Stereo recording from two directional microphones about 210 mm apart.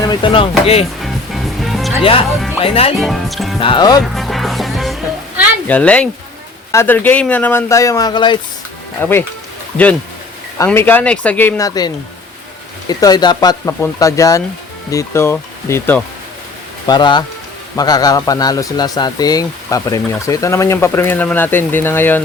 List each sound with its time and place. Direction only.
0.1 s speech: 25° left (ahead or behind)
1.0 s music: centre (ahead or behind)
2.0 s speech: 25° left (ahead or behind)
3.0 s speech: centre (ahead or behind)
3.6 s speech: 20° left (ahead or behind)
4.0 s music: centre (ahead or behind)
5.6 s speech: 5° left (ahead or behind)
9.0 s speech: 10° left (ahead or behind)
10.6 s speech: 10° left (ahead or behind)
12.9 s speech: 20° left (ahead or behind)
16.8 s speech: 20° left (ahead or behind)